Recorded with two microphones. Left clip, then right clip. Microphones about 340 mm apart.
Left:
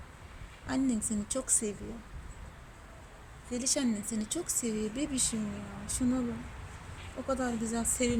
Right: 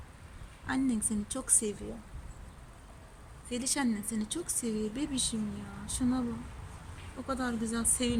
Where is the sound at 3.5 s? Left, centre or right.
Centre.